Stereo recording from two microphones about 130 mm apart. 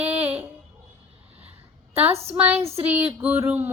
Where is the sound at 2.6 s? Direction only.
50° right (ahead or behind).